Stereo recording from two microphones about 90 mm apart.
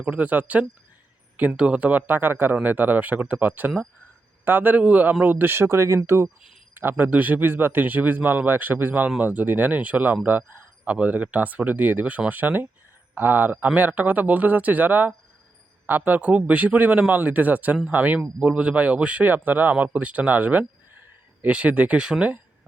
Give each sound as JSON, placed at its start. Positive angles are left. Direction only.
{"t": 0.0, "sound": "a man's voice", "side_deg": -15}
{"t": 6.2, "sound": "speech", "side_deg": -5}
{"t": 6.7, "sound": "a man's voice", "side_deg": -20}